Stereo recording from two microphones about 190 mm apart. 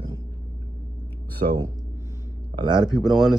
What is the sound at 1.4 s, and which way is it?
Speech, 35° right (ahead or behind).